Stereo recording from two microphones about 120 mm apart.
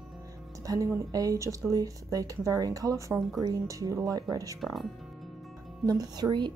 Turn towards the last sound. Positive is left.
turn(degrees=-35)  # may be behind; listen again after turning